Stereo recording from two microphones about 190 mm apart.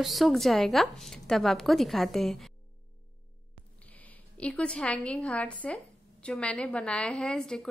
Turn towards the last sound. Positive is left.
turn(degrees=5)  # may be behind; listen again after turning